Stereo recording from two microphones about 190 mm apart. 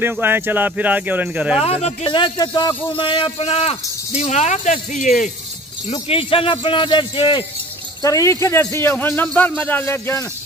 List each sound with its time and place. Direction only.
0.0 s speech: 10° right (ahead or behind)
1.6 s speech: 35° left (ahead or behind)
5.9 s a man's voice: 30° left (ahead or behind); by 10.2 s 10° left (ahead or behind)